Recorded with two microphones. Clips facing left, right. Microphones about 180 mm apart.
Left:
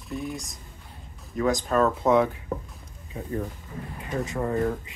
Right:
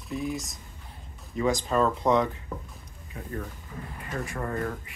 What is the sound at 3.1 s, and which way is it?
Speech, 25° left (ahead or behind).